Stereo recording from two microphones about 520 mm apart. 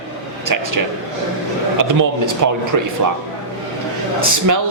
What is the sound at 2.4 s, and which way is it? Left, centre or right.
Speech, right.